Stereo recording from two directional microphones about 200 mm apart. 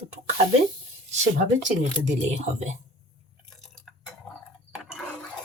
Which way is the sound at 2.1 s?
35° right (ahead or behind).